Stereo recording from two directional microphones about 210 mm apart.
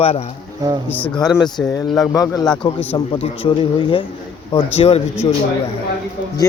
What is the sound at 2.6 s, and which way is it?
Speech, 25° left (ahead or behind).